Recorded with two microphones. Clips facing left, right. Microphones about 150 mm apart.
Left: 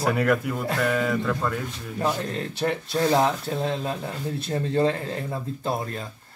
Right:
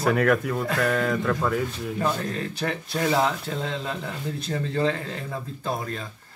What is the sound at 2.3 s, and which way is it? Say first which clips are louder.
Speech: left 2 dB; 25° left (ahead or behind).